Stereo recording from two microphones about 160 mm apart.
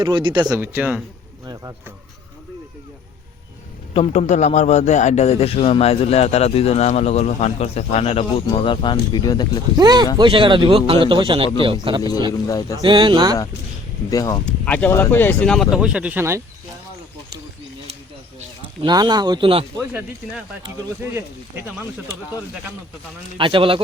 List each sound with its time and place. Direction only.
0.0 s speech: 30° right (ahead or behind)
0.6 s speech: 10° right (ahead or behind)
3.9 s a man's voice: 40° left (ahead or behind)
9.7 s a man's voice: 25° right (ahead or behind)
12.3 s speech: 20° left (ahead or behind)
12.8 s speech: 30° right (ahead or behind)
14.1 s speech: 20° left (ahead or behind)
14.6 s speech: 10° left (ahead or behind); by 16.4 s 15° right (ahead or behind)
18.9 s speech: 25° right (ahead or behind)
19.9 s speech: 10° right (ahead or behind)
23.4 s a man's voice: 30° right (ahead or behind)